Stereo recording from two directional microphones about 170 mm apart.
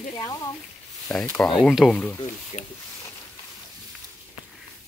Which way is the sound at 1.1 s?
5° left (ahead or behind).